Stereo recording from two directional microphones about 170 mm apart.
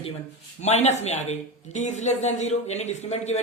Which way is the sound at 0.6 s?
40° left (ahead or behind).